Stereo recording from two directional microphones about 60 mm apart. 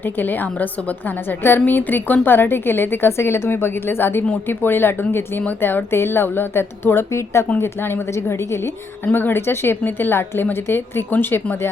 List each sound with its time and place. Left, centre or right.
0.0 s a woman's voice: left
7.6 s a woman's voice: left
9.1 s a woman's voice: left